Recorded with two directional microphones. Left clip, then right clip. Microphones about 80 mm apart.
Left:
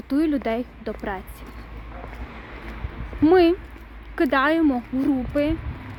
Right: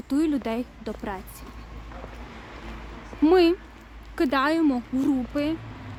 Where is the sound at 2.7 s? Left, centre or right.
Right.